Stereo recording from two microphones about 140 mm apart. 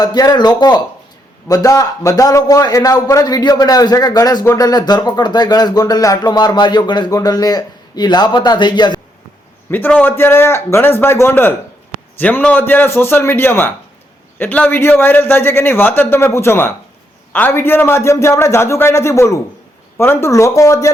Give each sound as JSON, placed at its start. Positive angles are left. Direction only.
{"t": 0.0, "sound": "a man's voice", "side_deg": 30}
{"t": 9.6, "sound": "a man's voice", "side_deg": 15}